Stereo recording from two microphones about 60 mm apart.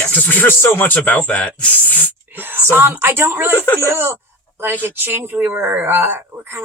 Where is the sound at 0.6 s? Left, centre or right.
Left.